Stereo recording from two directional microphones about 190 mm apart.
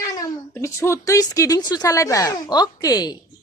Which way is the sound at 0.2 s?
15° left (ahead or behind).